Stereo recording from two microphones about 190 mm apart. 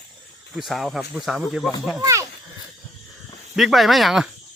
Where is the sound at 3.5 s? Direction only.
Centre (ahead or behind).